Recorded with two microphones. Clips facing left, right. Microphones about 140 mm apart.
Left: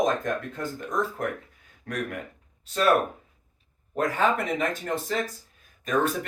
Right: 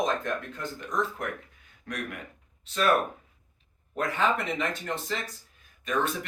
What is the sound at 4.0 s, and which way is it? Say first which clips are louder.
Speech: left 3 dB; 40° left (ahead or behind).